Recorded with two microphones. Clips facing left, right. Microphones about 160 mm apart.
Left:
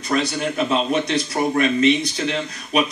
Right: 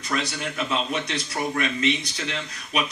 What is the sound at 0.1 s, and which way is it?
Speech, 40° left (ahead or behind).